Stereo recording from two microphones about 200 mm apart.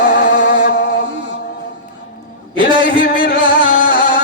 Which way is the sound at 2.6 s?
25° right (ahead or behind).